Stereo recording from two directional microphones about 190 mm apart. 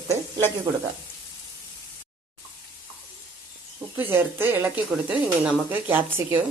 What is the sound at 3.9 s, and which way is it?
Speech, 10° right (ahead or behind).